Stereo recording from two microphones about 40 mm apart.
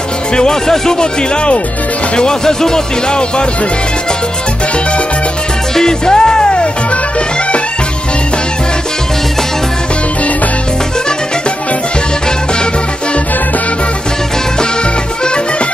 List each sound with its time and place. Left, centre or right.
0.4 s speech: centre
5.8 s music: centre